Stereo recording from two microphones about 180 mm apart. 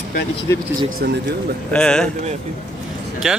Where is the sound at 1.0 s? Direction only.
60° right (ahead or behind).